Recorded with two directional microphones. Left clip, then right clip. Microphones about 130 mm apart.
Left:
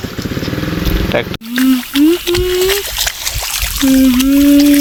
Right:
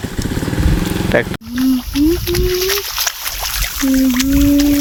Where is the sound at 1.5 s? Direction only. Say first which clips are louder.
Left 5 dB; 55° left (ahead or behind).